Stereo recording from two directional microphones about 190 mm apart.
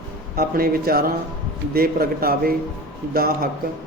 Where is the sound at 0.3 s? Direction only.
50° right (ahead or behind).